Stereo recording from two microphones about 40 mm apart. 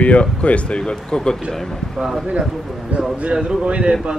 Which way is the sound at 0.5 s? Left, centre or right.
Left.